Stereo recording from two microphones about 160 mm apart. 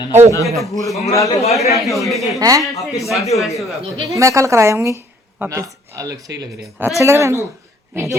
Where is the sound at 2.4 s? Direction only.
20° right (ahead or behind).